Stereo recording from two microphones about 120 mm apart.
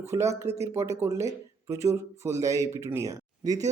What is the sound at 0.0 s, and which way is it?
Speech, 25° right (ahead or behind).